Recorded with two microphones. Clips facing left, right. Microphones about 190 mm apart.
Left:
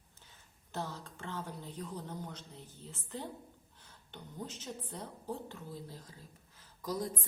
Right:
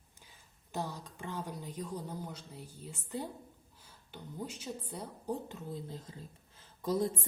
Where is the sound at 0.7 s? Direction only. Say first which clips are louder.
Right 2 dB; 15° right (ahead or behind).